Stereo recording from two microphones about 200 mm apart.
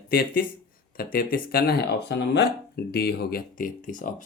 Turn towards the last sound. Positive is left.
turn(degrees=40)  # may be behind; listen again after turning